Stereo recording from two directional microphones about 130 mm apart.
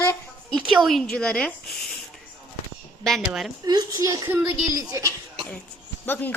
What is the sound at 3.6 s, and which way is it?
A child's voice, 30° right (ahead or behind).